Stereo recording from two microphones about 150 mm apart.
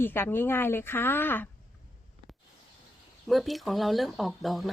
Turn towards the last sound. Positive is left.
turn(degrees=0)  # may be behind; listen again after turning